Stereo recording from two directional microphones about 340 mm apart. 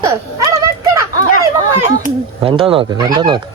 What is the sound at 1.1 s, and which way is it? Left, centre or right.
Chatter, left.